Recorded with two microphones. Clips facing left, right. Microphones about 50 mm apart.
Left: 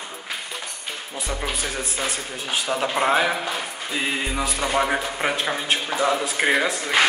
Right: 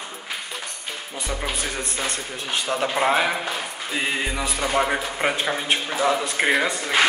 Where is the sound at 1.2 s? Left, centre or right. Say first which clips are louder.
Even; centre.